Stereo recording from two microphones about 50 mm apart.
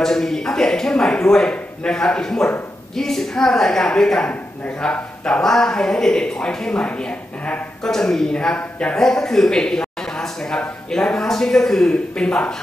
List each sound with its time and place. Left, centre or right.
0.0 s speech: centre